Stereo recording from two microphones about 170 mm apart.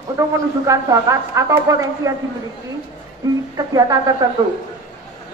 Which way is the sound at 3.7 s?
20° right (ahead or behind).